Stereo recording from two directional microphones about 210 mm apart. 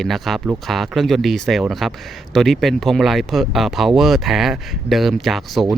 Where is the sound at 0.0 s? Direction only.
Centre (ahead or behind).